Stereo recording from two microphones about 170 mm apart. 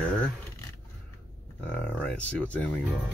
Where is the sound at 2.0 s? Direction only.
5° left (ahead or behind).